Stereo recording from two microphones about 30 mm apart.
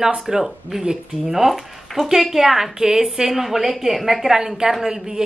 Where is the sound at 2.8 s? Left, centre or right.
Centre.